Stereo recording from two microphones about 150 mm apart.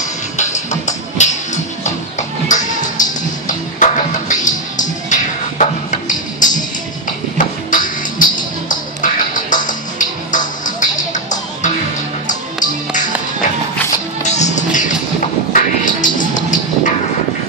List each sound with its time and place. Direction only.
0.0 s music: 55° left (ahead or behind)
14.2 s music: 50° left (ahead or behind)